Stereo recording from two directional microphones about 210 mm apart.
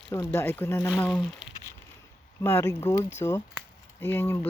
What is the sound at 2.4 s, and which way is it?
Speech, 10° left (ahead or behind).